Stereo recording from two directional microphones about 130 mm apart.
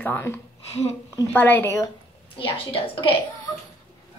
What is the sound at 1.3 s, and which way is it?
Speech, 15° left (ahead or behind).